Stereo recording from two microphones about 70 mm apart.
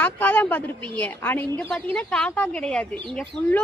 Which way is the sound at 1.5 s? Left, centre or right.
Centre.